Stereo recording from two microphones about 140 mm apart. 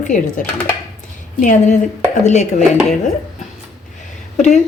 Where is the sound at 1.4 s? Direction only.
70° left (ahead or behind).